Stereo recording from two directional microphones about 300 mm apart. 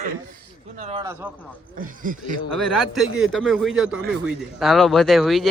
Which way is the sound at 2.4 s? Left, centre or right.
Centre.